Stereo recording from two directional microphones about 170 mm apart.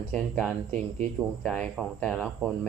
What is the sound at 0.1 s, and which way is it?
Speech, 5° left (ahead or behind).